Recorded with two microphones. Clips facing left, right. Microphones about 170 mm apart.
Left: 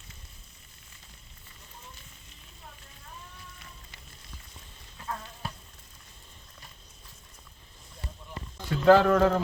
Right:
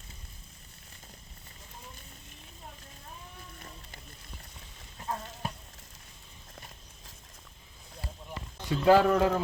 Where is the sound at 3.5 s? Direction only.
40° right (ahead or behind).